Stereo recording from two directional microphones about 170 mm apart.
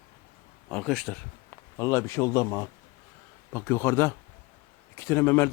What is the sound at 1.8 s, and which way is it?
Speech, 15° left (ahead or behind).